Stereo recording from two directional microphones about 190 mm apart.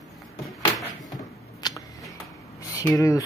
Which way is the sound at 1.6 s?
20° left (ahead or behind).